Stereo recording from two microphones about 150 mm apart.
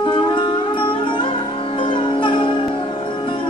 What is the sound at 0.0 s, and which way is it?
Music, 30° left (ahead or behind).